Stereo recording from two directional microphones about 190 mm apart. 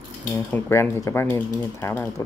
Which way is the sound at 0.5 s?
15° left (ahead or behind).